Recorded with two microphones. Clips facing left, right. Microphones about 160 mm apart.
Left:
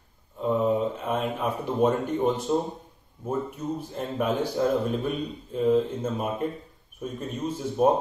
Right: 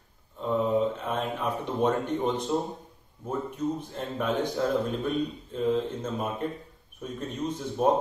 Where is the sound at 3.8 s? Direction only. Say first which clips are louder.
Left 3 dB; 10° left (ahead or behind).